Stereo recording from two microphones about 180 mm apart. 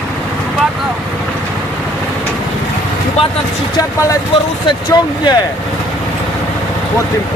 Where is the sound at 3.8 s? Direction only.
15° left (ahead or behind).